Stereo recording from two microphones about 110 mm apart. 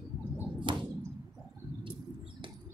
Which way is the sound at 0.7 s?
50° right (ahead or behind).